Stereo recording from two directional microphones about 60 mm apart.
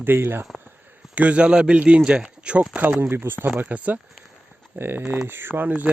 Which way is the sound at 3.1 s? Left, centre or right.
Right.